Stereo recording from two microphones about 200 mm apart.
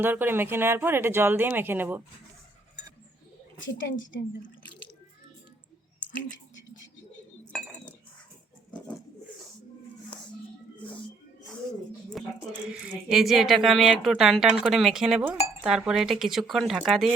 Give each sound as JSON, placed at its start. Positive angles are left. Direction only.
{"t": 0.0, "sound": "speech", "side_deg": -10}
{"t": 3.8, "sound": "a woman's voice", "side_deg": 75}
{"t": 7.5, "sound": "cutlery", "side_deg": -5}
{"t": 12.2, "sound": "speech", "side_deg": 0}